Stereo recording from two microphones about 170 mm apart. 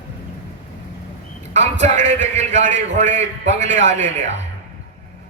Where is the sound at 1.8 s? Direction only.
45° right (ahead or behind).